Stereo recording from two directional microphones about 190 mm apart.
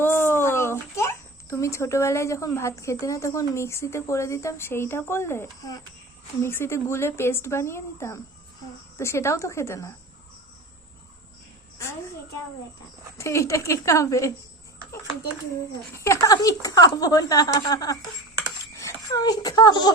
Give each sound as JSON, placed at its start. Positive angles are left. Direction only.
{"t": 0.0, "sound": "a child's voice", "side_deg": 10}
{"t": 11.8, "sound": "a woman's voice", "side_deg": 15}
{"t": 13.1, "sound": "a woman's voice", "side_deg": 15}
{"t": 16.0, "sound": "speech", "side_deg": 15}